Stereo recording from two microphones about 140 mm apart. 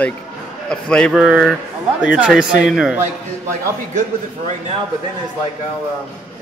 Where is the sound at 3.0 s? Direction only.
65° right (ahead or behind).